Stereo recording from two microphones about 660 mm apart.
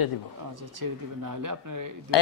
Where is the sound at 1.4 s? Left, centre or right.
Right.